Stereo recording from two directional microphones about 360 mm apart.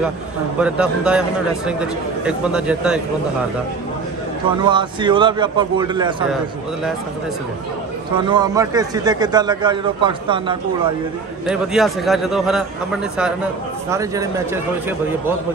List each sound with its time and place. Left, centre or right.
0.6 s a man's voice: centre
4.6 s a man's voice: centre
8.3 s a man's voice: centre
11.4 s a man's voice: centre